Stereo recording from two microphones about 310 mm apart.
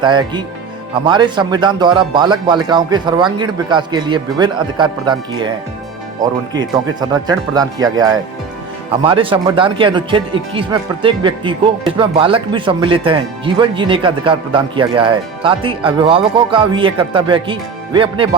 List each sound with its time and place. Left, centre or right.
0.0 s speech: centre